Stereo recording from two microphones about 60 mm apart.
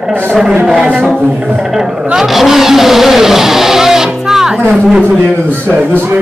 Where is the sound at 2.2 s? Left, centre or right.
Centre.